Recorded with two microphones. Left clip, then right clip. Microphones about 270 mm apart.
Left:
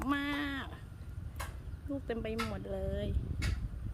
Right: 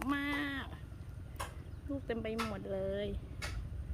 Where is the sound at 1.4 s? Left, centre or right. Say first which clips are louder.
Right 1 dB; right.